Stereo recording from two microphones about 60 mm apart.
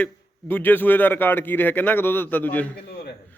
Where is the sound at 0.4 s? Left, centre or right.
Left.